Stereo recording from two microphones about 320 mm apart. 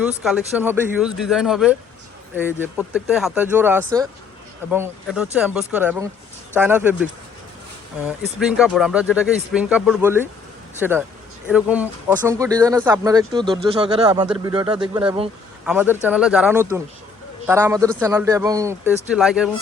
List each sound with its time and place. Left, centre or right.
0.0 s speech: centre
15.6 s a man's voice: centre